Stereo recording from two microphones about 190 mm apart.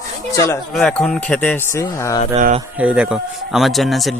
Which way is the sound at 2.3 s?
40° right (ahead or behind).